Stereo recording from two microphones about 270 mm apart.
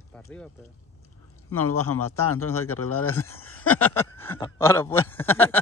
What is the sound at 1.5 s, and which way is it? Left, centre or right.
Speech, left.